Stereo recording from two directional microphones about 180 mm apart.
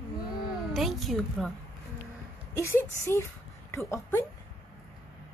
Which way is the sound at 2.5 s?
15° left (ahead or behind).